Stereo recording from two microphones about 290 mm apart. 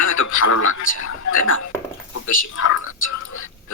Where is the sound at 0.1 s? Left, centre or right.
Left.